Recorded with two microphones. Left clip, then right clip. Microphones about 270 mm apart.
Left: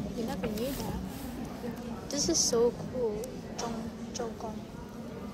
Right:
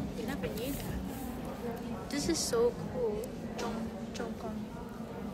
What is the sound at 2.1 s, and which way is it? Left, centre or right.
Speech, centre.